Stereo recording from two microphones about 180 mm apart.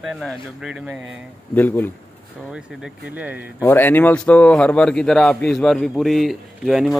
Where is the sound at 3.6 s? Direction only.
10° left (ahead or behind).